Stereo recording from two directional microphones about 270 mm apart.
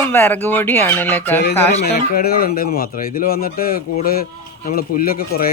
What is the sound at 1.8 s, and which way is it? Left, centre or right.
Speech, left.